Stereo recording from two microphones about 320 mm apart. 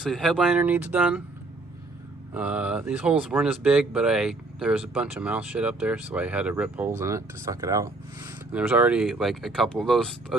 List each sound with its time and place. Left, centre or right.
0.0 s speech: centre
2.3 s speech: centre